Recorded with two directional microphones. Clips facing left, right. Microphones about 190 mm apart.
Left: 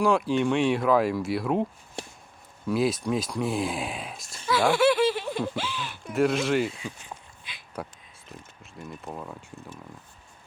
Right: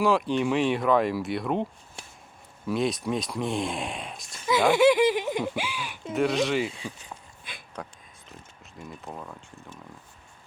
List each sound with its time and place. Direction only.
0.0 s speech: centre (ahead or behind)
2.6 s speech: centre (ahead or behind)
4.4 s speech: 20° right (ahead or behind)
6.1 s speech: centre (ahead or behind)
7.5 s a sound: 50° right (ahead or behind)
8.8 s speech: centre (ahead or behind)